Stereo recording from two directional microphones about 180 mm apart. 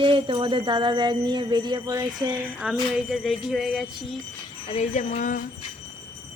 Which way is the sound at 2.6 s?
5° right (ahead or behind).